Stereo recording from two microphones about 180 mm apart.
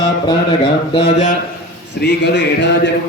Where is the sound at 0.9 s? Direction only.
40° left (ahead or behind).